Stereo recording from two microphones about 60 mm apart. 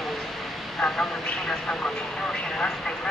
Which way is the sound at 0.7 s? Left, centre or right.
Centre.